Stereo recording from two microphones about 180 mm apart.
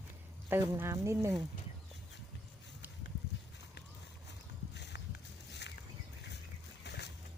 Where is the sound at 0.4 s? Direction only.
10° right (ahead or behind).